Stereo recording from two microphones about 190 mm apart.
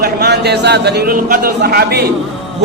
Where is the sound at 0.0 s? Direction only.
60° right (ahead or behind).